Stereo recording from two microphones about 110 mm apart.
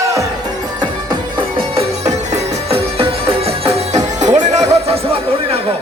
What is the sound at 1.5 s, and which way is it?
Music, 60° right (ahead or behind).